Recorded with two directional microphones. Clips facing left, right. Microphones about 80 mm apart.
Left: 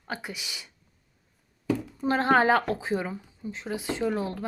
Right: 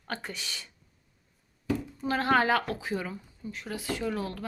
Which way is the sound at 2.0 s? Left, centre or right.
Left.